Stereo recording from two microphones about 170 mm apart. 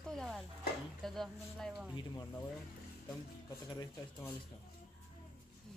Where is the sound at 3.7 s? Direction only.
25° left (ahead or behind).